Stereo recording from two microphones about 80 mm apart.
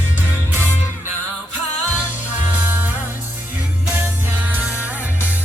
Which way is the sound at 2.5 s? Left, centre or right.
Right.